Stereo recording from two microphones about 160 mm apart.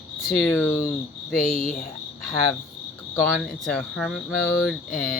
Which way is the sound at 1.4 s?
60° left (ahead or behind).